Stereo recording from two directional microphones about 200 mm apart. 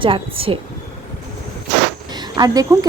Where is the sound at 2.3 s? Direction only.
20° right (ahead or behind).